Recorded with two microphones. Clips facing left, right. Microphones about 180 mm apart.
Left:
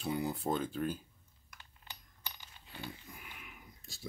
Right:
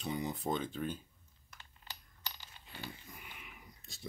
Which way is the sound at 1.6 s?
15° left (ahead or behind).